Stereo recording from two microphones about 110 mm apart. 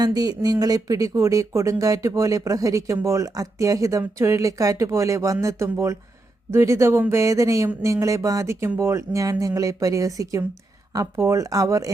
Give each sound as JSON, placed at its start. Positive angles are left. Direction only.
{"t": 0.0, "sound": "speech", "side_deg": -35}